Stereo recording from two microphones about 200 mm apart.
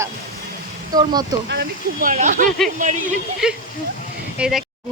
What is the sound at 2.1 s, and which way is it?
Speech, 40° right (ahead or behind).